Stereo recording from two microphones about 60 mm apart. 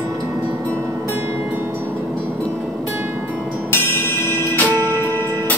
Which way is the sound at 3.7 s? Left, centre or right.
Left.